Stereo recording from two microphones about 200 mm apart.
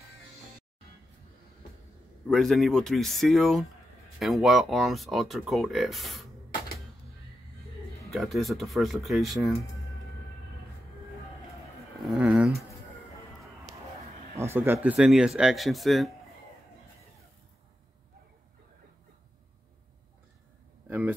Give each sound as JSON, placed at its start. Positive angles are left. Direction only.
{"t": 2.2, "sound": "speech", "side_deg": 0}
{"t": 8.1, "sound": "speech", "side_deg": 0}
{"t": 12.1, "sound": "speech", "side_deg": -5}
{"t": 14.4, "sound": "speech", "side_deg": -10}